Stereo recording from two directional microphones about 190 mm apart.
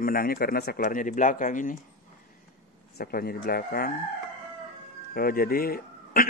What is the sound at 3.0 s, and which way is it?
Speech, 50° left (ahead or behind).